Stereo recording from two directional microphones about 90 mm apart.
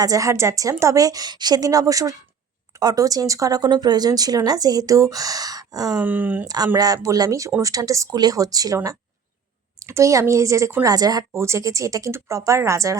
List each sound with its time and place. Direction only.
0.0 s a woman's voice: 40° right (ahead or behind)
6.0 s speech: 20° right (ahead or behind)
6.7 s a woman's voice: 40° right (ahead or behind)
11.3 s a woman's voice: 30° right (ahead or behind)